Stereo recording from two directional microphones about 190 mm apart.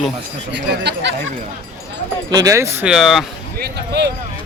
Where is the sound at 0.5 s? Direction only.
65° right (ahead or behind).